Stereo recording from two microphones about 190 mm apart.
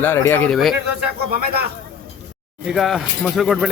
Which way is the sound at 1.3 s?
55° right (ahead or behind).